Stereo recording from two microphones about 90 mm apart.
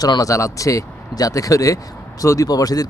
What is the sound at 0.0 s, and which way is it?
Speech, 40° left (ahead or behind).